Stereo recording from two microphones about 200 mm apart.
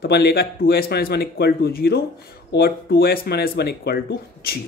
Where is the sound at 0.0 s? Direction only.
55° left (ahead or behind).